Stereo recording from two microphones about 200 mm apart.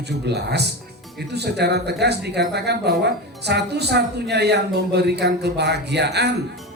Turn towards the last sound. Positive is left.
turn(degrees=-55)  # may be behind; listen again after turning